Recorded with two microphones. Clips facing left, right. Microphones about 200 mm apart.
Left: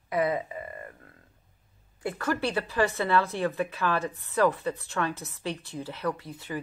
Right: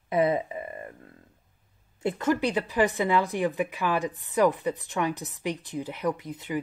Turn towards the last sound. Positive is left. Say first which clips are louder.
# right 3 dB
turn(degrees=-20)  # may be behind; listen again after turning